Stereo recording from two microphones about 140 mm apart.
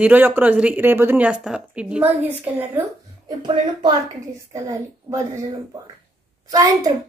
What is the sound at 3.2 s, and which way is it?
A woman's voice, 35° right (ahead or behind).